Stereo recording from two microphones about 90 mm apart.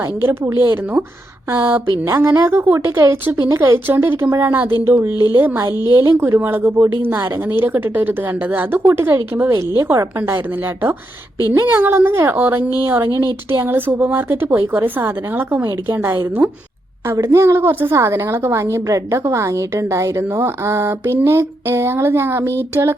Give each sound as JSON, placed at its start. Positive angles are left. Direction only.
{"t": 0.0, "sound": "a woman's voice", "side_deg": -30}
{"t": 6.4, "sound": "a woman's voice", "side_deg": -20}
{"t": 11.6, "sound": "a woman's voice", "side_deg": -25}